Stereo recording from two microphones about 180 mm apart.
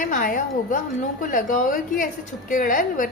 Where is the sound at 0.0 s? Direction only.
50° left (ahead or behind).